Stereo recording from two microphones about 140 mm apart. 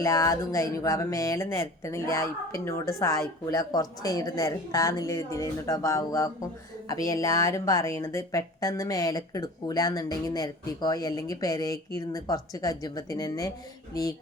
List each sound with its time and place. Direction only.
0.0 s speech: 25° left (ahead or behind)